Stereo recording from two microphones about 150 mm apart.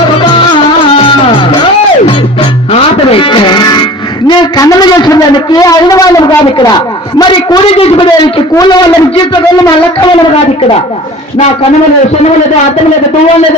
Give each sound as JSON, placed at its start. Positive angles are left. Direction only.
{"t": 3.1, "sound": "music", "side_deg": 35}
{"t": 4.3, "sound": "a man's voice", "side_deg": 30}
{"t": 7.6, "sound": "speech", "side_deg": 40}
{"t": 8.5, "sound": "a man's voice", "side_deg": 30}